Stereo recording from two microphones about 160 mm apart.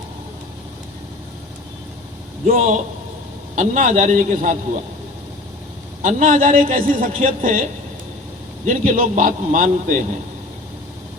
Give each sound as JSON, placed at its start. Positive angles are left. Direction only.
{"t": 2.5, "sound": "a man's voice", "side_deg": -55}
{"t": 6.0, "sound": "a man's voice", "side_deg": -55}
{"t": 8.6, "sound": "a man's voice", "side_deg": -55}